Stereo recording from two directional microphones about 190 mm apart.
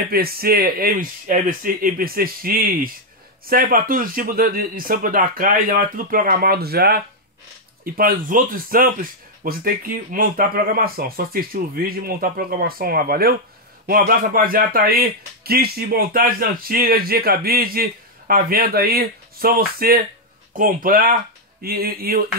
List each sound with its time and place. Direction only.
0.1 s speech: 50° right (ahead or behind)